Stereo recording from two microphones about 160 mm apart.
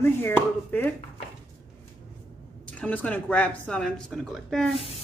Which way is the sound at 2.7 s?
10° left (ahead or behind).